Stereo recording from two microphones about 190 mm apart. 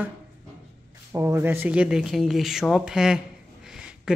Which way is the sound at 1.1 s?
15° right (ahead or behind).